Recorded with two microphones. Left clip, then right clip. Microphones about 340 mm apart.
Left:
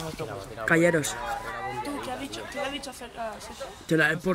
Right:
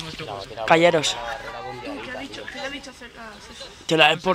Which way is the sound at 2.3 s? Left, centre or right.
Centre.